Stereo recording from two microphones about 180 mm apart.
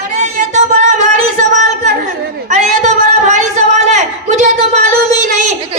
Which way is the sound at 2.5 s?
40° right (ahead or behind).